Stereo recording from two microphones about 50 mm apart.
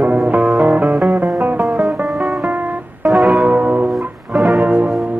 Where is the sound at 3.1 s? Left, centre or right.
Centre.